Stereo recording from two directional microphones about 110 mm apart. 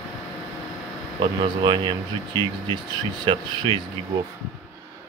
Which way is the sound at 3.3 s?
50° right (ahead or behind).